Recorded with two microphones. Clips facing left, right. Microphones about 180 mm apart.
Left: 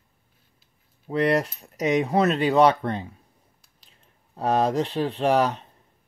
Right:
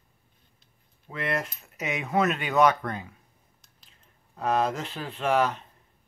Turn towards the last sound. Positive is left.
turn(degrees=35)  # may be behind; listen again after turning